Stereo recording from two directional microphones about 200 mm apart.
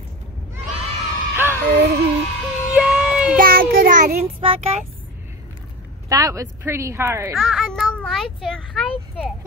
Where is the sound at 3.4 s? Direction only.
45° right (ahead or behind); by 4.9 s 30° right (ahead or behind).